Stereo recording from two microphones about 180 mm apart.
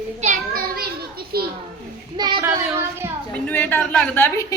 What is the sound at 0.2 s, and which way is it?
Children playing, 40° right (ahead or behind).